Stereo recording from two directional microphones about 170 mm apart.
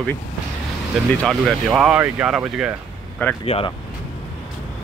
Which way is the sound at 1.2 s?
Centre (ahead or behind).